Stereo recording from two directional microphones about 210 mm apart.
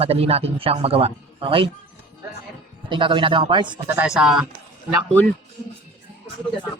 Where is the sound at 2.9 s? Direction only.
25° right (ahead or behind).